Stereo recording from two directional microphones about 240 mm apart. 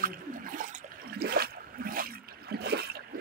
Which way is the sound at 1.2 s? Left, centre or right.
Right.